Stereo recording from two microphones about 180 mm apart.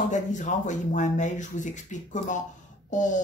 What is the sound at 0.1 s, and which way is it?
Speech, 45° left (ahead or behind).